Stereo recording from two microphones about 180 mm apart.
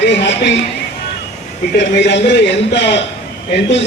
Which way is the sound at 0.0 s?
75° left (ahead or behind).